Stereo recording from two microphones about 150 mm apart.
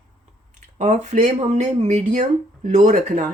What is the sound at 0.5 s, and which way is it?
Speech, 55° right (ahead or behind).